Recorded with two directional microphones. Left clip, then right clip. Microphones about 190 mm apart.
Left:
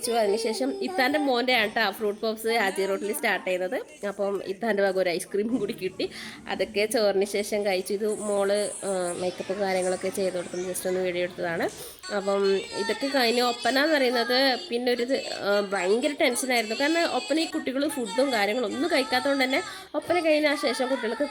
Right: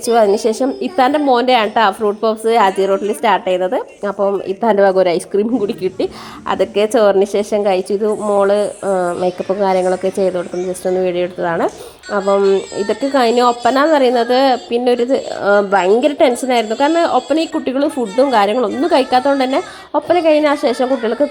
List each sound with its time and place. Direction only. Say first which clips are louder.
0.0 s a woman's voice: right 12 dB; 15° right (ahead or behind)
0.6 s speech: right 11 dB; centre (ahead or behind)
12.3 s speech: right 12 dB; 25° left (ahead or behind)
12.7 s speech: right 11 dB; centre (ahead or behind)